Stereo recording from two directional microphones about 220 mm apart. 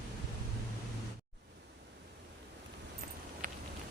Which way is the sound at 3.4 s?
40° right (ahead or behind).